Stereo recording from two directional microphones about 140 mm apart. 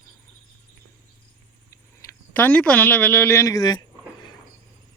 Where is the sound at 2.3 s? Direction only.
10° left (ahead or behind).